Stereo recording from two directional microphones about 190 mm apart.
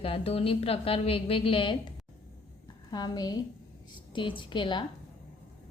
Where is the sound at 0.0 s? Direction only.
30° left (ahead or behind).